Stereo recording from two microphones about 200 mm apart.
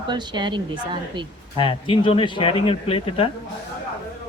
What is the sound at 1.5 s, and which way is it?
Speech, 25° left (ahead or behind).